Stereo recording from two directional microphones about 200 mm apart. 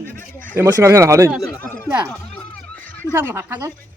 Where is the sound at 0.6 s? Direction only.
15° right (ahead or behind).